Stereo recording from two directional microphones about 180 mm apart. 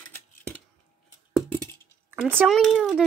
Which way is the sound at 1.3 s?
5° left (ahead or behind).